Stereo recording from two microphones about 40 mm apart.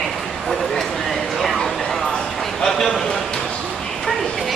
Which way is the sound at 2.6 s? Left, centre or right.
Centre.